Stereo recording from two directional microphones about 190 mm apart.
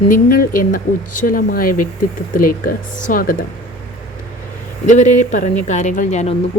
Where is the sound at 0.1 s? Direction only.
50° left (ahead or behind).